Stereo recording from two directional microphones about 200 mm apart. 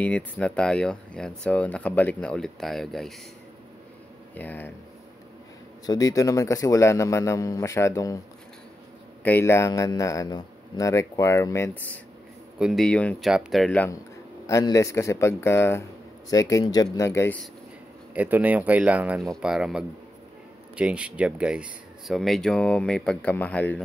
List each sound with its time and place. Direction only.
0.0 s speech: 5° left (ahead or behind)
4.4 s speech: 10° left (ahead or behind)
5.9 s speech: 15° left (ahead or behind)
9.2 s speech: 10° left (ahead or behind)
12.5 s speech: centre (ahead or behind)
18.1 s speech: 10° right (ahead or behind); by 23.8 s 10° left (ahead or behind)